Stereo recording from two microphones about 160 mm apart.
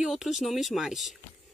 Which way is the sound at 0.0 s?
5° right (ahead or behind).